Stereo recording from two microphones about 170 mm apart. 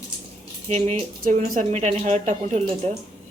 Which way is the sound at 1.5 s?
40° right (ahead or behind).